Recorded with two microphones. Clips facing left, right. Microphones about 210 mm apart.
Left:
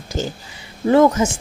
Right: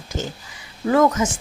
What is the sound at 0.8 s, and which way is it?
Speech, 30° left (ahead or behind).